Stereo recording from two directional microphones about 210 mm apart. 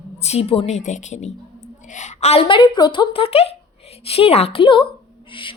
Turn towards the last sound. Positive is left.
turn(degrees=25)  # may be behind; listen again after turning